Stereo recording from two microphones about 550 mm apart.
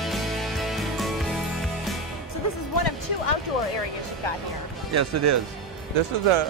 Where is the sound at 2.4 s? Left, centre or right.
Left.